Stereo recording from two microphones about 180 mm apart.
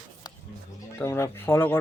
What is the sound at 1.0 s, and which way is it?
Speech, 15° left (ahead or behind).